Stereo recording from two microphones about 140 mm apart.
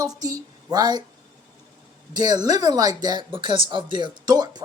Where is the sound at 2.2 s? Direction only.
30° right (ahead or behind).